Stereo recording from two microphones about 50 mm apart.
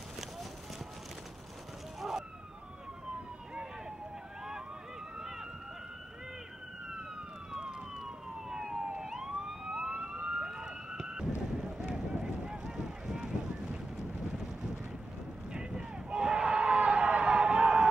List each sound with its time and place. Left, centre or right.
2.0 s police car: centre
7.5 s emergency vehicle: centre
10.9 s boat: centre
15.5 s a sound: centre